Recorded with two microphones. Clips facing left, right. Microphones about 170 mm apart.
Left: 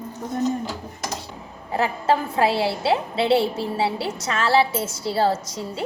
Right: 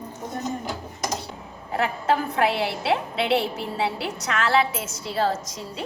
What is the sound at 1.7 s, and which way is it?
A woman's voice, 30° left (ahead or behind).